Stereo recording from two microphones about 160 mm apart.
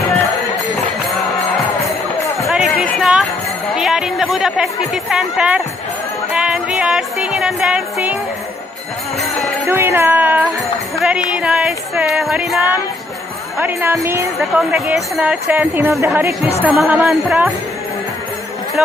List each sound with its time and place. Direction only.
2.5 s music: 5° right (ahead or behind)
3.0 s a sound: centre (ahead or behind)
3.8 s speech: centre (ahead or behind)
9.6 s speech: 15° right (ahead or behind)
13.6 s speech: 10° right (ahead or behind)
14.3 s speech: centre (ahead or behind)